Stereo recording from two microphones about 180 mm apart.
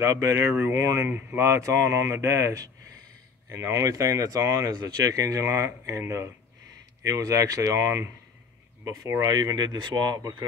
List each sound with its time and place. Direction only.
0.0 s speech: 20° right (ahead or behind)